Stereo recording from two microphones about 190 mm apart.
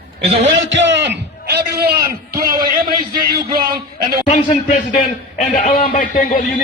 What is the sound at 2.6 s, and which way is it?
A man's voice, 50° right (ahead or behind).